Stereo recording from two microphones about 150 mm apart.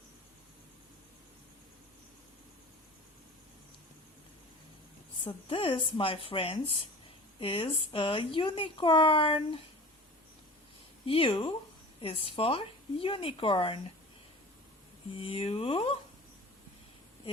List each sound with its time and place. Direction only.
5.2 s speech: 35° left (ahead or behind)
11.0 s speech: 35° left (ahead or behind)
15.2 s speech: 40° left (ahead or behind)